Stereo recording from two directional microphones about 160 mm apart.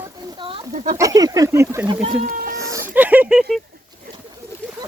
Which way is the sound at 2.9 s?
10° right (ahead or behind).